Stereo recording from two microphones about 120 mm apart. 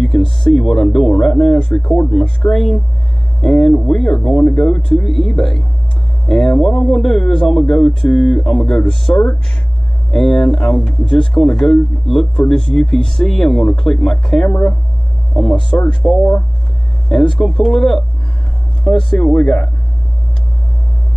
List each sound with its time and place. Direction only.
0.0 s speech: 5° left (ahead or behind)
16.2 s speech: 20° left (ahead or behind)
17.1 s speech: centre (ahead or behind)
19.0 s speech: 5° left (ahead or behind)